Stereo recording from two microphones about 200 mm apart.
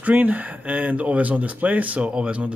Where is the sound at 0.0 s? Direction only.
10° right (ahead or behind).